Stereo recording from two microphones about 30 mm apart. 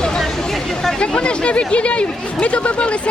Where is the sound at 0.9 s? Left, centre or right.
Left.